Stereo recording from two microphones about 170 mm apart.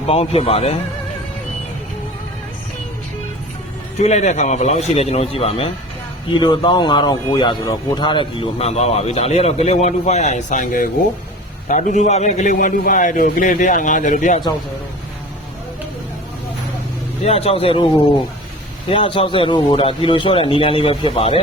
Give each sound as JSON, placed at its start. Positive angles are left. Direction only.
{"t": 0.1, "sound": "speech", "side_deg": 35}
{"t": 3.9, "sound": "a man's voice", "side_deg": 40}
{"t": 17.2, "sound": "speech", "side_deg": 35}
{"t": 18.9, "sound": "speech", "side_deg": 35}